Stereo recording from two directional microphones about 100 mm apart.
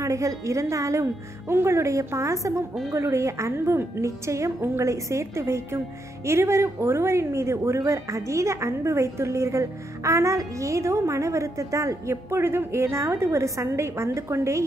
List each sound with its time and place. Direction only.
0.0 s a woman's voice: 35° right (ahead or behind)